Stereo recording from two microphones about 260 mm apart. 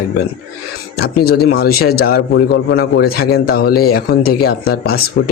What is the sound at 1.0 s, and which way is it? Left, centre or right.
A man's voice, left.